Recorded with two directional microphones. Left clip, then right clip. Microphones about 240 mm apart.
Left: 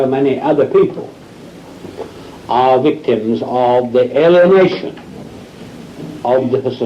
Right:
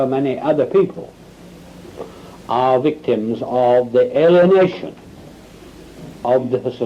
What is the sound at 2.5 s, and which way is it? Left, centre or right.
A man's voice, centre.